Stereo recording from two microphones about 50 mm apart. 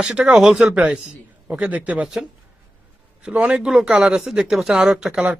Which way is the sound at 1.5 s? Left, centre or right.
Right.